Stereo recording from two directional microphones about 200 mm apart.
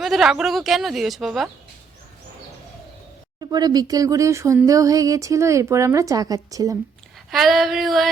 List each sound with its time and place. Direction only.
0.0 s speech: centre (ahead or behind)
3.5 s speech: 20° right (ahead or behind)
7.3 s speech: centre (ahead or behind)